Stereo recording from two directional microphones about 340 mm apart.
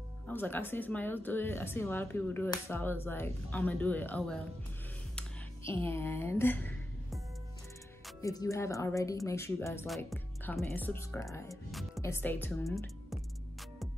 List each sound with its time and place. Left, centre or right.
0.3 s speech: centre
5.7 s a woman's voice: centre
8.2 s speech: centre